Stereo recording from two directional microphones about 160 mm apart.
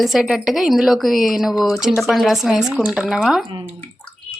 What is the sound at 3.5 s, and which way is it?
Speech, 30° right (ahead or behind).